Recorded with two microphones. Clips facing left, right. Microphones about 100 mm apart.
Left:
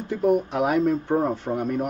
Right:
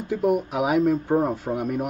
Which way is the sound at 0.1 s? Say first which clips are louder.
Left 1 dB; 5° right (ahead or behind).